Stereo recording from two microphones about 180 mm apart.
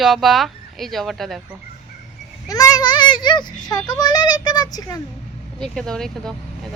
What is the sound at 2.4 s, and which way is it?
A child's voice, 20° left (ahead or behind).